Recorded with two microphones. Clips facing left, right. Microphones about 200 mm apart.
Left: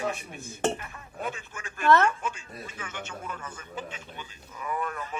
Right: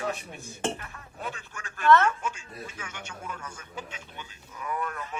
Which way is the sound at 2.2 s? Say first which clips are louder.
Even; 10° right (ahead or behind).